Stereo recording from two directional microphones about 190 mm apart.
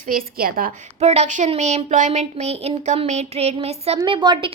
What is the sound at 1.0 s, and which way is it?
Speech, 35° right (ahead or behind).